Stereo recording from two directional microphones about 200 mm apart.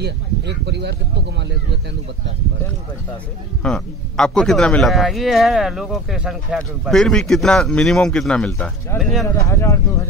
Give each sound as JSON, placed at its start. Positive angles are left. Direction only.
{"t": 0.0, "sound": "speech", "side_deg": -55}
{"t": 3.6, "sound": "a man's voice", "side_deg": 5}
{"t": 9.3, "sound": "speech", "side_deg": 15}